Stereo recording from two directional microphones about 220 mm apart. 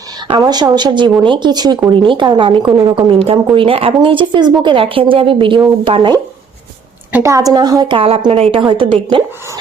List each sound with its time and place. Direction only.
0.3 s a woman's voice: 20° right (ahead or behind)